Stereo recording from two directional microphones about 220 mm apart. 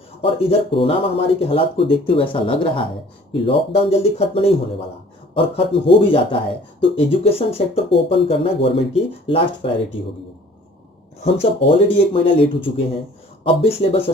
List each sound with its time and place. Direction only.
0.2 s speech: 25° left (ahead or behind)
11.3 s speech: 25° left (ahead or behind)